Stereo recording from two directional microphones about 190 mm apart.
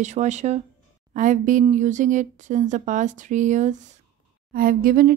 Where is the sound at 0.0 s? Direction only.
40° right (ahead or behind).